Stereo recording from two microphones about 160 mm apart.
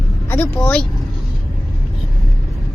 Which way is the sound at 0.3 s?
15° left (ahead or behind).